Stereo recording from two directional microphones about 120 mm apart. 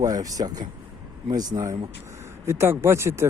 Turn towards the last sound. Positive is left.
turn(degrees=-20)  # may be behind; listen again after turning